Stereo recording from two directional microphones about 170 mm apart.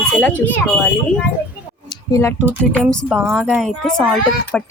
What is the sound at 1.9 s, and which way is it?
Clicking, 20° left (ahead or behind).